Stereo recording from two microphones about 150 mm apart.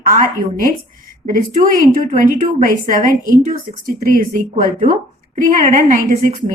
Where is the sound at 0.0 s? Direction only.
65° right (ahead or behind).